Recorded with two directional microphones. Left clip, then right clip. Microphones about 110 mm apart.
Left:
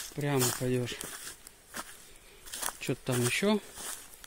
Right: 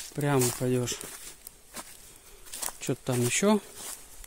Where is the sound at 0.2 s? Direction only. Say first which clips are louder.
Right 5 dB; 55° right (ahead or behind).